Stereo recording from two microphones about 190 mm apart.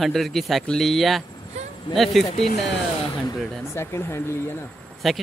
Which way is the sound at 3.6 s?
15° left (ahead or behind).